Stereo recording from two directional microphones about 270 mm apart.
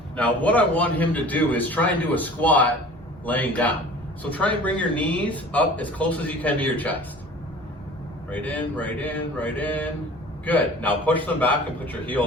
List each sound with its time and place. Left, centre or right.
0.2 s a man's voice: centre
8.3 s a man's voice: centre